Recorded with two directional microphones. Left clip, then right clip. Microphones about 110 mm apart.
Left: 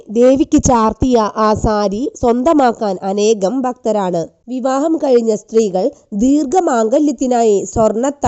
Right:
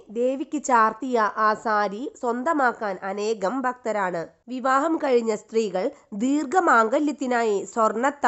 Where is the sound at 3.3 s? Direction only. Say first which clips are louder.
Left 9 dB; 60° left (ahead or behind).